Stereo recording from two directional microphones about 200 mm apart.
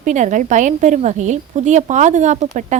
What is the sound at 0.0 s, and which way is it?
A woman's voice, 40° right (ahead or behind).